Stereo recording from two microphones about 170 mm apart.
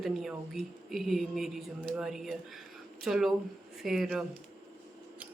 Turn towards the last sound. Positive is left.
turn(degrees=0)  # may be behind; listen again after turning